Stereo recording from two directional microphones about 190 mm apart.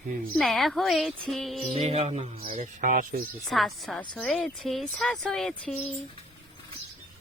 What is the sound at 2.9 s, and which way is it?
Speech, 45° right (ahead or behind).